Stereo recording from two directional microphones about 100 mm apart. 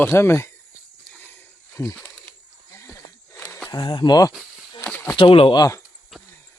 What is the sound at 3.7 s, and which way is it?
Speech, 50° left (ahead or behind).